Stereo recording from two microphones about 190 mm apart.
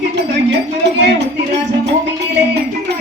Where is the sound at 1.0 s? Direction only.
65° right (ahead or behind).